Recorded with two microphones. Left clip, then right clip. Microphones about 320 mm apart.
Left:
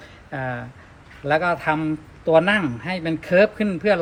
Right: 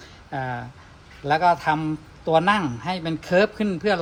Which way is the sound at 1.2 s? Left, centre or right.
Right.